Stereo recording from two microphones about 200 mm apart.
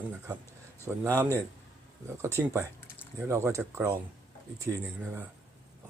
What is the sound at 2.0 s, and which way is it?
Speech, 15° right (ahead or behind).